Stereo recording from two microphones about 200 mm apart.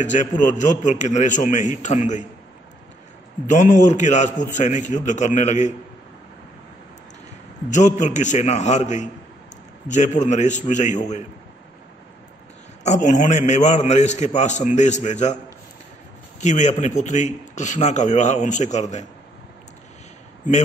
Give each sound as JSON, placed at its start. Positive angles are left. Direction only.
{"t": 0.0, "sound": "a man's voice", "side_deg": 35}
{"t": 3.4, "sound": "a man's voice", "side_deg": 40}
{"t": 7.7, "sound": "a man's voice", "side_deg": 35}
{"t": 12.8, "sound": "a man's voice", "side_deg": 35}
{"t": 16.3, "sound": "a man's voice", "side_deg": 35}